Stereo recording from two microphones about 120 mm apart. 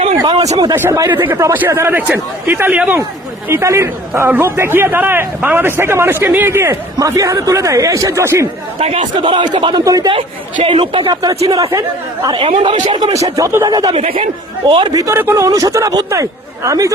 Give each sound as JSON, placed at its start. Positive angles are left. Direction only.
{"t": 0.3, "sound": "a sound", "side_deg": -65}
{"t": 0.8, "sound": "a man's voice", "side_deg": -25}
{"t": 8.8, "sound": "speech", "side_deg": -50}
{"t": 9.8, "sound": "speech", "side_deg": -30}
{"t": 10.1, "sound": "a man's voice", "side_deg": -50}
{"t": 12.3, "sound": "speech", "side_deg": -45}
{"t": 13.2, "sound": "a man's voice", "side_deg": -30}
{"t": 13.9, "sound": "speech", "side_deg": -55}
{"t": 14.7, "sound": "speech", "side_deg": -40}
{"t": 14.9, "sound": "a man's voice", "side_deg": -25}